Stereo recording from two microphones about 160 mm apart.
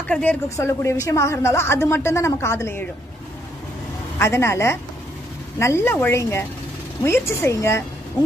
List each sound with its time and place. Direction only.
0.1 s a woman's voice: 10° left (ahead or behind)
4.2 s a woman's voice: 15° left (ahead or behind)